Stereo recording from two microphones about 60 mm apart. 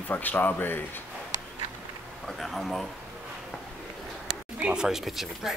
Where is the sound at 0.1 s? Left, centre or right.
Left.